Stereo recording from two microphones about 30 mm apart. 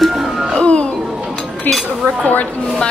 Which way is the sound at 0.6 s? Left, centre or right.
Left.